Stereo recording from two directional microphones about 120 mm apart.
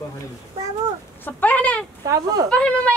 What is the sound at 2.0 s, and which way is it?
Speech, 30° right (ahead or behind).